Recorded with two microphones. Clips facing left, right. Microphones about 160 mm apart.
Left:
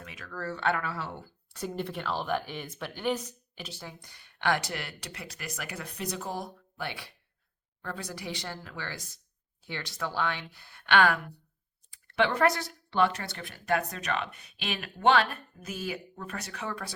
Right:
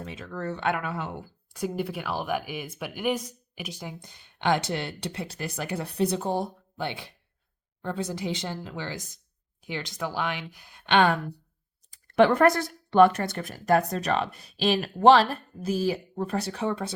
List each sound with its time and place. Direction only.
0.0 s a woman's voice: 30° right (ahead or behind)
11.9 s speech: 45° right (ahead or behind); by 16.9 s 25° right (ahead or behind)